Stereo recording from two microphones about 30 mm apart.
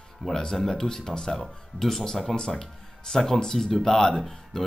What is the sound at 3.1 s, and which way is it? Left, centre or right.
Speech, left.